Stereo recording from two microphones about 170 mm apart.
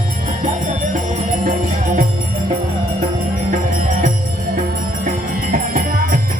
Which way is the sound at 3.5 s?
50° right (ahead or behind).